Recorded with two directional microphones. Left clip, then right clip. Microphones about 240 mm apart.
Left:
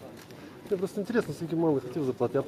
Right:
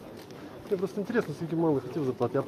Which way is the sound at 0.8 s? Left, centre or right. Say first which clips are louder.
Left 1 dB; centre.